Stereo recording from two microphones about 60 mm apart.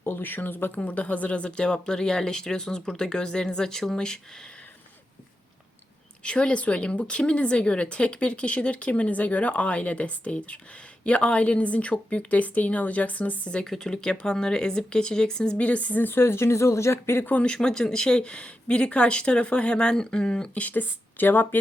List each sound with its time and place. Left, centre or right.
0.0 s speech: left; by 4.2 s centre
6.2 s a woman's voice: centre; by 17.2 s left
17.4 s speech: centre; by 21.6 s left